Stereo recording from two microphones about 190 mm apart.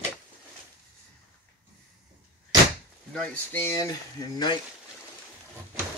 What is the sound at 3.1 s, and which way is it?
Speech, 10° left (ahead or behind).